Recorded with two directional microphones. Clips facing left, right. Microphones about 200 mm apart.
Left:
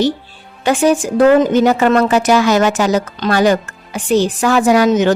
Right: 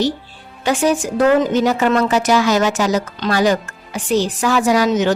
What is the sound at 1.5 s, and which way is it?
Speech, 55° left (ahead or behind).